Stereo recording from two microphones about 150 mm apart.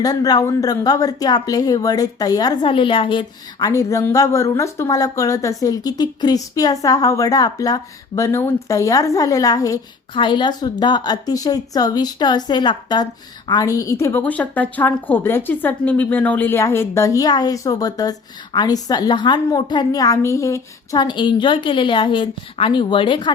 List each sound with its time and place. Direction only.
0.0 s a woman's voice: 25° left (ahead or behind)
3.7 s a woman's voice: 20° left (ahead or behind)